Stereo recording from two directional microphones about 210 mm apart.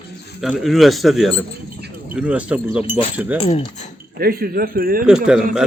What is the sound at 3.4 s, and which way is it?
Speech, 30° left (ahead or behind).